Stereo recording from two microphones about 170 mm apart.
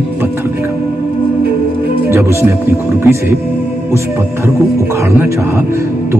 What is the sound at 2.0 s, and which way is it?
Speech, 15° right (ahead or behind).